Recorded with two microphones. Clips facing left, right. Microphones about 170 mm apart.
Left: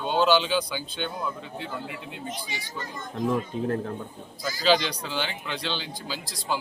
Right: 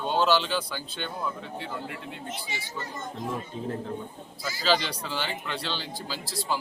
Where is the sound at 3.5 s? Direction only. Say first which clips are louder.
Left 5 dB; 65° left (ahead or behind).